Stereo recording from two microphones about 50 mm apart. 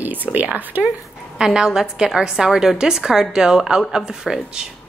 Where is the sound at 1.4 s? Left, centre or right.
Centre.